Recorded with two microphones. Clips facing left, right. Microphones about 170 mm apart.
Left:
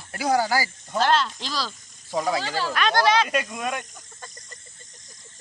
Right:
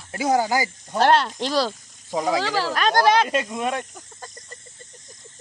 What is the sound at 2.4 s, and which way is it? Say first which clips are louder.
Speech: right 4 dB; 90° right.